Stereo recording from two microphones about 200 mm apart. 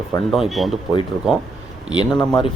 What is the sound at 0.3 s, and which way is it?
Speech, centre (ahead or behind).